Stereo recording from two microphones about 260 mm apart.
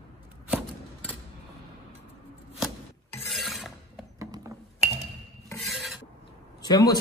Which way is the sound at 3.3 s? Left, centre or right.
Centre.